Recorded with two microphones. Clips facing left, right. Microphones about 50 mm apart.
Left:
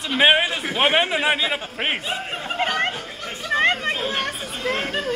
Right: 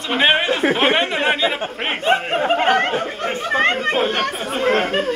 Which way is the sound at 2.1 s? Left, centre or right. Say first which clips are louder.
Right 11 dB; right.